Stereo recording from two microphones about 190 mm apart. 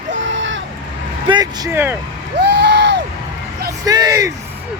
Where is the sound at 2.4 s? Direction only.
65° right (ahead or behind).